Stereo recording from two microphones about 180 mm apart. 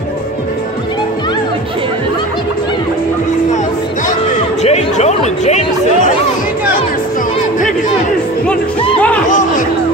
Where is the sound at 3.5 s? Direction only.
40° left (ahead or behind).